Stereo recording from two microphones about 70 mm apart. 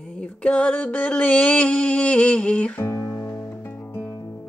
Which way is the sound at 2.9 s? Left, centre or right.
Left.